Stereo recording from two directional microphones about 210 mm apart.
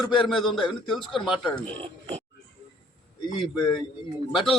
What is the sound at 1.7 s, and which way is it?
Speech, 25° right (ahead or behind).